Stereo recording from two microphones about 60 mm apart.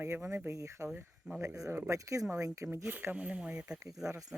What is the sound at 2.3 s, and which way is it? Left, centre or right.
Speech, right.